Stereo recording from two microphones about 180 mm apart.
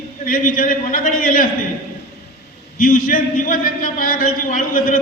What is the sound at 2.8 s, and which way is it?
A man's voice, 55° left (ahead or behind).